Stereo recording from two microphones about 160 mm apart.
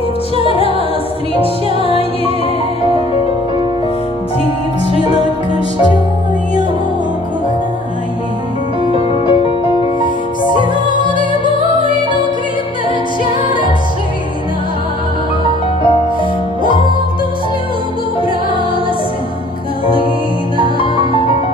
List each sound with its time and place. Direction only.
0.5 s music: 35° left (ahead or behind)
1.9 s music: 35° left (ahead or behind)
8.9 s music: 35° left (ahead or behind)
20.6 s music: 35° left (ahead or behind)